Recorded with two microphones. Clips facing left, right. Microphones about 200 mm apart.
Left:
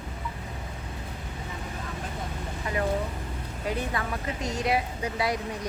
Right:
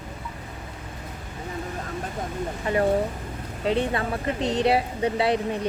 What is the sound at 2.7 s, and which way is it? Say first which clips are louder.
Speech: right 6 dB; 30° right (ahead or behind).